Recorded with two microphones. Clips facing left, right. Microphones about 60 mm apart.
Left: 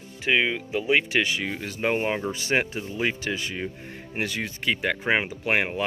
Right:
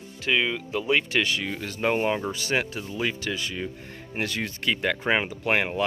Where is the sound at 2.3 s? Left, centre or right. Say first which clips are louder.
Left 2 dB; left.